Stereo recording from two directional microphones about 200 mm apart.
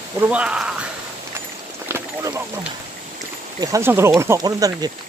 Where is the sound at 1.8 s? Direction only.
15° right (ahead or behind).